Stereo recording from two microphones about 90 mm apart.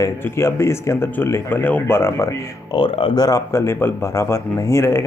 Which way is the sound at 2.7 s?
70° left (ahead or behind).